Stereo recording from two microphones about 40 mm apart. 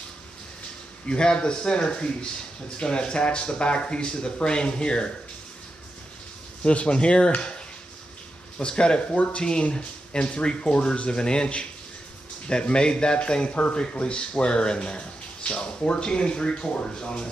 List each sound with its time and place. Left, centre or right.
1.0 s a man's voice: left
6.6 s a man's voice: left